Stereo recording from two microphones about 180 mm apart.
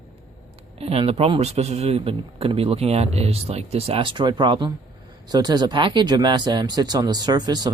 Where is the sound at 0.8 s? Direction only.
35° right (ahead or behind).